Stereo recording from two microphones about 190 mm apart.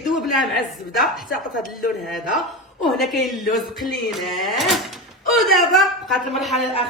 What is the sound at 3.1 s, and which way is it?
Speech, centre (ahead or behind).